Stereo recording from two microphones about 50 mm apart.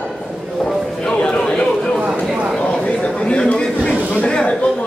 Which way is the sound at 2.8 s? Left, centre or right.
Centre.